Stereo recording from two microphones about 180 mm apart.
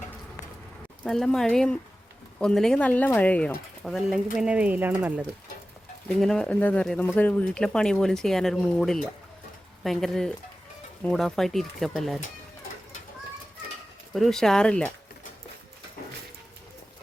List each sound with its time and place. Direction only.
1.0 s speech: centre (ahead or behind)
6.1 s speech: 5° left (ahead or behind)
14.1 s speech: centre (ahead or behind)